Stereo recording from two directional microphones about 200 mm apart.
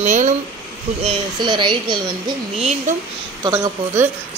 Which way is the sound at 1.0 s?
25° right (ahead or behind).